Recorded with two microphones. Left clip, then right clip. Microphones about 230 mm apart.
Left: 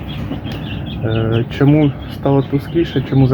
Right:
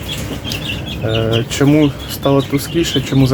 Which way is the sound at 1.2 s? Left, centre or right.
Centre.